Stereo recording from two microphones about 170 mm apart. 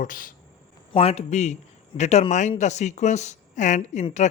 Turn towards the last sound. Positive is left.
turn(degrees=45)  # may be behind; listen again after turning